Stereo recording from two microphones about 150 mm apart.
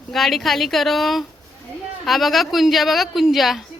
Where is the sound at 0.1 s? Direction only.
Centre (ahead or behind).